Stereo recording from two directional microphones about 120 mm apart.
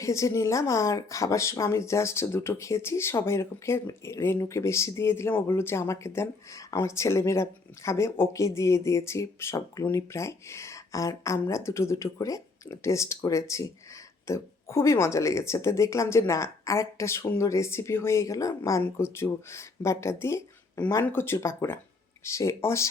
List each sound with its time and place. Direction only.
0.0 s speech: 25° left (ahead or behind)